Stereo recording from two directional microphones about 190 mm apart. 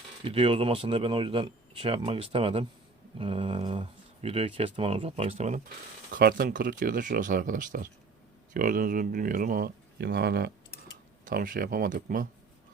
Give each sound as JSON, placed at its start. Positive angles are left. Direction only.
{"t": 0.3, "sound": "speech", "side_deg": -30}
{"t": 6.1, "sound": "speech", "side_deg": -50}
{"t": 11.3, "sound": "speech", "side_deg": -45}